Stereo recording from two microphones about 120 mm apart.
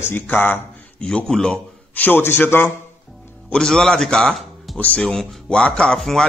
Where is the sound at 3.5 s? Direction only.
5° left (ahead or behind).